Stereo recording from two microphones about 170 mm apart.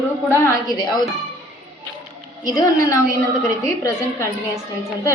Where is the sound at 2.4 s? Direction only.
20° left (ahead or behind).